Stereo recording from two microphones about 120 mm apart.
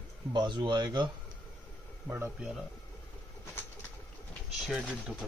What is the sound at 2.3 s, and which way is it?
Speech, centre (ahead or behind).